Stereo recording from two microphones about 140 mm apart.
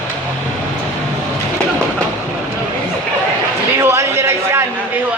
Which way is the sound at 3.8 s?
20° right (ahead or behind).